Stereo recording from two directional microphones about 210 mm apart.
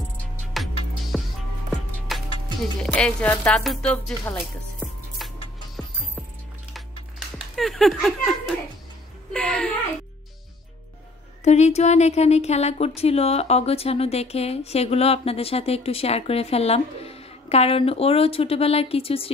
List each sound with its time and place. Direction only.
0.5 s music: centre (ahead or behind)
2.0 s speech: centre (ahead or behind)
3.9 s music: 10° left (ahead or behind)
7.3 s giggle: centre (ahead or behind)
9.3 s a sound: 5° left (ahead or behind)
11.4 s speech: 30° left (ahead or behind)